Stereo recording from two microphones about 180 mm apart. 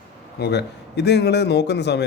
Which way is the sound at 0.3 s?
65° left (ahead or behind).